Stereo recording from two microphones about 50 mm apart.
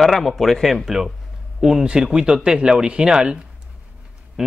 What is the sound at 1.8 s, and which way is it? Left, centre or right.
Speech, centre.